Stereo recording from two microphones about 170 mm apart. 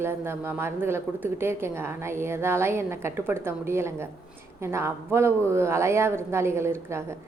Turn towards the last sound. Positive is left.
turn(degrees=-15)  # may be behind; listen again after turning